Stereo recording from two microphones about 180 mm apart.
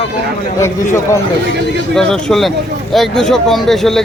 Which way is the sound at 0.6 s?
15° left (ahead or behind).